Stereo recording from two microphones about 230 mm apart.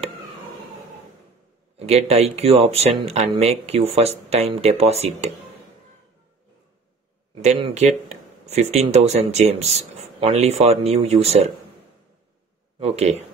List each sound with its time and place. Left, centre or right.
1.8 s speech: right
7.4 s speech: right
12.7 s speech: right